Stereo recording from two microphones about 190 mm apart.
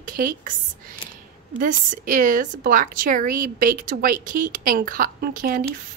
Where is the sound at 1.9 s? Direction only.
45° right (ahead or behind).